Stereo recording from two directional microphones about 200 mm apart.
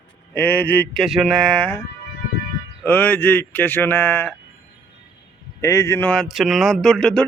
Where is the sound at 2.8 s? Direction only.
10° left (ahead or behind).